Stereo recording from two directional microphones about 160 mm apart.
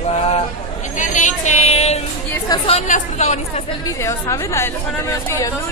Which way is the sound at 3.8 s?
20° left (ahead or behind).